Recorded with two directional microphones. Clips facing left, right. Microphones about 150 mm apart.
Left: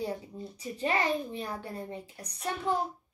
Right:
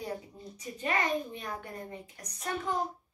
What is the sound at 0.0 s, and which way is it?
A child's voice, 30° left (ahead or behind).